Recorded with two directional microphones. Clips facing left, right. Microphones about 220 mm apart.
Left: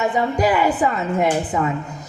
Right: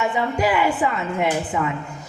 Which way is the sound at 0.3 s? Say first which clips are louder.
Left 1 dB; 40° left (ahead or behind).